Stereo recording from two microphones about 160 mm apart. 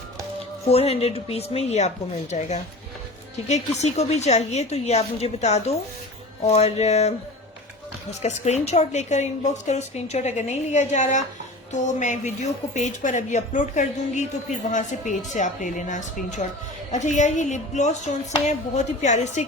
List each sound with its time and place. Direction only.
0.7 s a woman's voice: 40° left (ahead or behind)
3.5 s a woman's voice: 45° left (ahead or behind)
8.2 s a woman's voice: 45° left (ahead or behind)